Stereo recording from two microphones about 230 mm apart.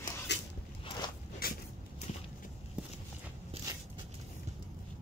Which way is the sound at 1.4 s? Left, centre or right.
Left.